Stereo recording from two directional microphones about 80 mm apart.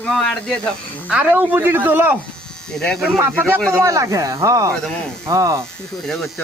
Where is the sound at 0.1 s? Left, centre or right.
Centre.